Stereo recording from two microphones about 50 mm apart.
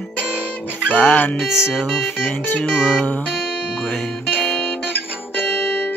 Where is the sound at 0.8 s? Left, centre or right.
Left.